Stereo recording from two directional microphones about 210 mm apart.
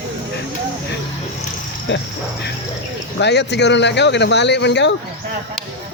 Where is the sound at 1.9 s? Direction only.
60° left (ahead or behind).